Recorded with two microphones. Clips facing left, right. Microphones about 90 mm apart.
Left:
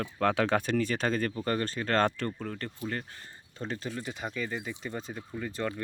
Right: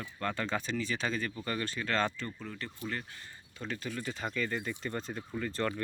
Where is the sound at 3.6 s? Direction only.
30° left (ahead or behind).